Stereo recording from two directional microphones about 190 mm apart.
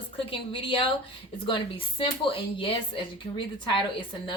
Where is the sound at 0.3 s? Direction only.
30° left (ahead or behind).